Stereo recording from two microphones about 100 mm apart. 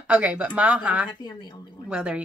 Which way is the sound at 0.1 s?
15° right (ahead or behind).